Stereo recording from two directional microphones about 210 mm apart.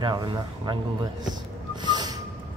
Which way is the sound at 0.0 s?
20° right (ahead or behind).